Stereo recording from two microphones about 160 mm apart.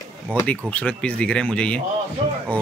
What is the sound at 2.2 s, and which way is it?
Speech, 35° right (ahead or behind).